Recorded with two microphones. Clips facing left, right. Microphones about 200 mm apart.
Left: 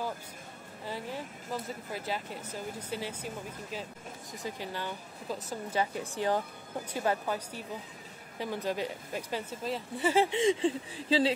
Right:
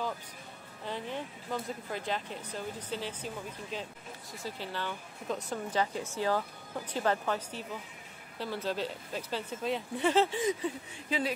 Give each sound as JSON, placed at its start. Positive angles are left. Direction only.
{"t": 0.8, "sound": "speech", "side_deg": 5}
{"t": 6.1, "sound": "speech", "side_deg": 20}
{"t": 10.3, "sound": "a sound", "side_deg": 25}